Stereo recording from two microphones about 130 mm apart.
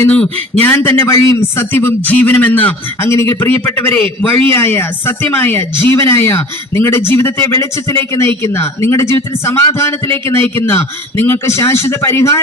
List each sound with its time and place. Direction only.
0.1 s a man's voice: 10° left (ahead or behind)